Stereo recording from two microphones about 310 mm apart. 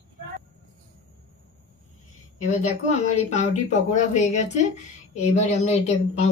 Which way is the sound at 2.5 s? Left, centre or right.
Left.